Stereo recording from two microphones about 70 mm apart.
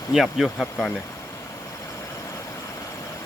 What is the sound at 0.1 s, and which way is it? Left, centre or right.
Speech, centre.